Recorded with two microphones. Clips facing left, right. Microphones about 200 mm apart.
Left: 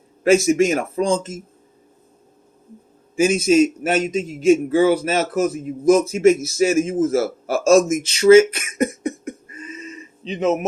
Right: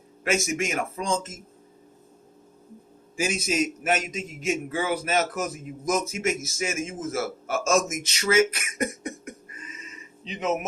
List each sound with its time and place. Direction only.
0.3 s a man's voice: 35° left (ahead or behind)
3.2 s a man's voice: 25° left (ahead or behind)